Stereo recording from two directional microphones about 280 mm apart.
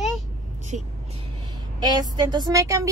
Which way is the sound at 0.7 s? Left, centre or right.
Right.